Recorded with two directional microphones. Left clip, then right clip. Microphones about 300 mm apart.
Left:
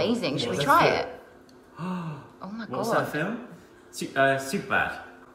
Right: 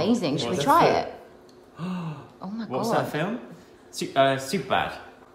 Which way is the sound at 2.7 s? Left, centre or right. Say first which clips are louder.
Right 1 dB; centre.